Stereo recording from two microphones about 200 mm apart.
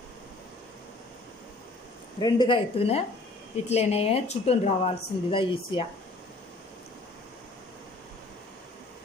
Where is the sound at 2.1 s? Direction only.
20° left (ahead or behind).